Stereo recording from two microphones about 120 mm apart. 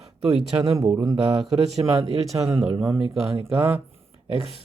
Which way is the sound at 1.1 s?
60° right (ahead or behind).